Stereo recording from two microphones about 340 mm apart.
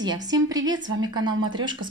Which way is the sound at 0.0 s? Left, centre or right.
Centre.